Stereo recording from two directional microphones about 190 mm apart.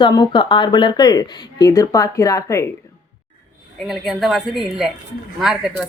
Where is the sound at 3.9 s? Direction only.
Centre (ahead or behind).